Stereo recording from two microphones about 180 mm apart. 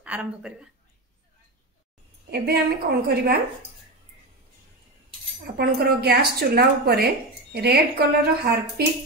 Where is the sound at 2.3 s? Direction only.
60° right (ahead or behind).